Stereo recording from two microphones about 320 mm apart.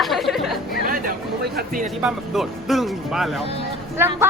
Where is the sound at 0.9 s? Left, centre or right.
Right.